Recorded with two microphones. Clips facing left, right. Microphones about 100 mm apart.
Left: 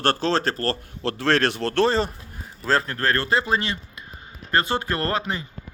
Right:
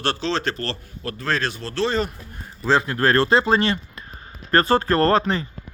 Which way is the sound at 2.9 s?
25° right (ahead or behind).